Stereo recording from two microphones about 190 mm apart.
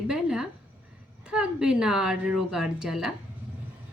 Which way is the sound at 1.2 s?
5° right (ahead or behind).